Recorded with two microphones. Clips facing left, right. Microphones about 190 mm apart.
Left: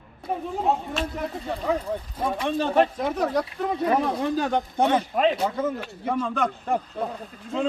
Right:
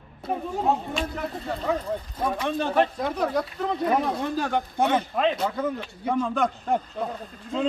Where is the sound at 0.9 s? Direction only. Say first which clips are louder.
Left 1 dB; 5° left (ahead or behind).